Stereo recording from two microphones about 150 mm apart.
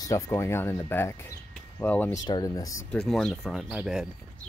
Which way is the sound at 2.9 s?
5° left (ahead or behind).